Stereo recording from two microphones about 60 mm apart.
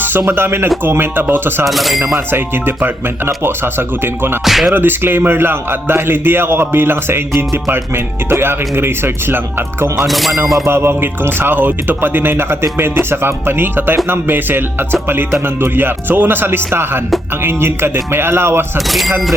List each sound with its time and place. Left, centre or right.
0.3 s a man's voice: right
1.6 s speech: centre
2.1 s a man's voice: right
4.4 s speech: centre
4.7 s a man's voice: right
10.1 s speech: centre
10.7 s a man's voice: right
18.9 s speech: centre